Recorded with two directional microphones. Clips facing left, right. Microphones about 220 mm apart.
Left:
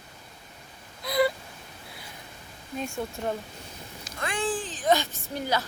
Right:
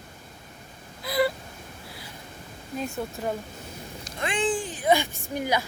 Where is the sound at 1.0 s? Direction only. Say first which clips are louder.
Even; centre (ahead or behind).